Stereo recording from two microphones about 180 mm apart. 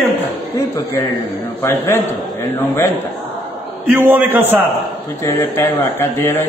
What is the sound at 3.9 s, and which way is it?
Speech, 10° right (ahead or behind).